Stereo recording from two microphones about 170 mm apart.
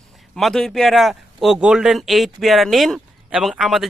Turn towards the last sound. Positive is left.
turn(degrees=0)  # may be behind; listen again after turning